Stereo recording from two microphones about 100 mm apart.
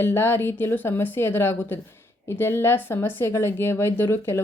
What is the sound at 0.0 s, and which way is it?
A woman's voice, 20° left (ahead or behind).